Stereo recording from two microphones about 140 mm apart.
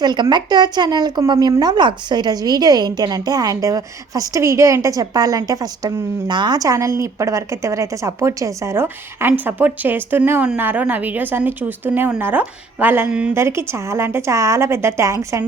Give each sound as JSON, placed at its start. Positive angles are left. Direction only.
{"t": 0.0, "sound": "a woman's voice", "side_deg": -30}